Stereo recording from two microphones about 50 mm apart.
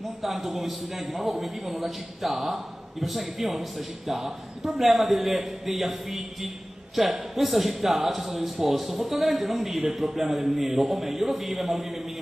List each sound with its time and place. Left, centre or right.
0.2 s speech: centre